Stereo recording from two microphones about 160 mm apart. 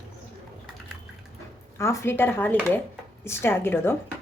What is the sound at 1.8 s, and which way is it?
Speech, 15° left (ahead or behind).